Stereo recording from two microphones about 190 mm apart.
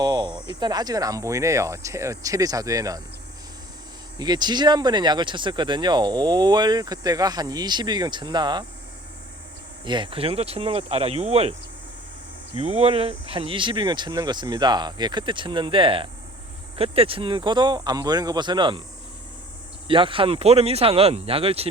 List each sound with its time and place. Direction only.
0.0 s speech: 20° right (ahead or behind)
4.2 s speech: 20° right (ahead or behind)
9.8 s speech: 25° right (ahead or behind)
12.5 s speech: 30° right (ahead or behind)
19.9 s speech: 25° right (ahead or behind)